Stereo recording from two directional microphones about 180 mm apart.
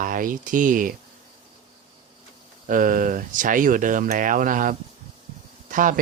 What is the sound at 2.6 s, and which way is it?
Speech, 50° right (ahead or behind).